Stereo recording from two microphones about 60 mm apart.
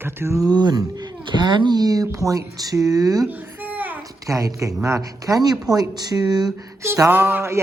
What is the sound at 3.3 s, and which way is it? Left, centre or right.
Babbling, right.